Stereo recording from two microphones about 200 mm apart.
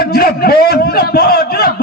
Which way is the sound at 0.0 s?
50° left (ahead or behind).